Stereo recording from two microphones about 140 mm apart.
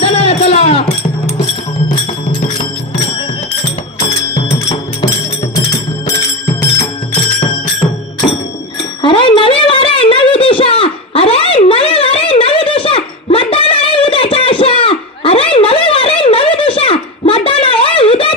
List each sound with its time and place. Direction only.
0.0 s music: 45° left (ahead or behind)
5.7 s music: 20° left (ahead or behind)
9.0 s a sound: 35° left (ahead or behind)